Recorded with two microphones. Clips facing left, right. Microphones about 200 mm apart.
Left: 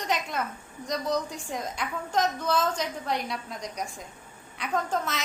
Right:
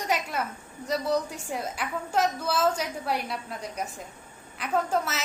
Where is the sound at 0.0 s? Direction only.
10° right (ahead or behind).